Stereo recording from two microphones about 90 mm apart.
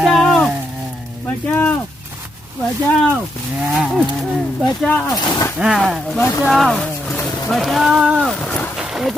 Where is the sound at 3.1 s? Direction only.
15° right (ahead or behind).